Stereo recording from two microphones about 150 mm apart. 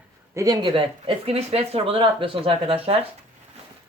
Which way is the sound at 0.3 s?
25° right (ahead or behind).